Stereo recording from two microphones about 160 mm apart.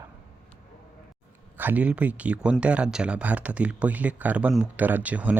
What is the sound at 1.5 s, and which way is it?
Speech, 10° right (ahead or behind).